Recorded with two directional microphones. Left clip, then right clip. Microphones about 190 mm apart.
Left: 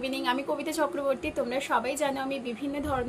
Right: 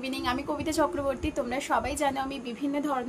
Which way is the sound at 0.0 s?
20° right (ahead or behind).